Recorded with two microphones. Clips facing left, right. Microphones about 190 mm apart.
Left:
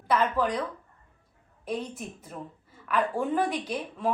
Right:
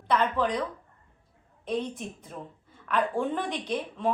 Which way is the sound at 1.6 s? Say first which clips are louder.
Right 2 dB; 5° left (ahead or behind).